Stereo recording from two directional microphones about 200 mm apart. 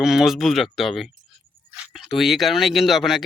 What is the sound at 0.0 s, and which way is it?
Speech, centre (ahead or behind).